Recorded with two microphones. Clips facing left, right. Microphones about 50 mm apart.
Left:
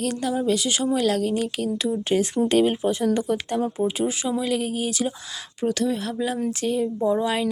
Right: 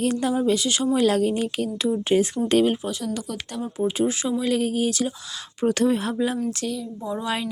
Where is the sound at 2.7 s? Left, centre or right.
Centre.